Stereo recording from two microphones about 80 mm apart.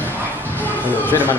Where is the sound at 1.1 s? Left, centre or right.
Left.